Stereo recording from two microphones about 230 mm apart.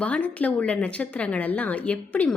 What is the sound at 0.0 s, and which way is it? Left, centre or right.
Speech, centre.